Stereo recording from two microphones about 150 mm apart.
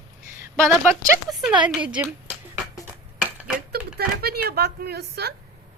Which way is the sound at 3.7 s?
90° right.